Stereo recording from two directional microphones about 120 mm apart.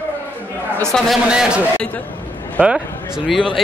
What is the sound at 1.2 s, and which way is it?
A man's voice, 5° right (ahead or behind).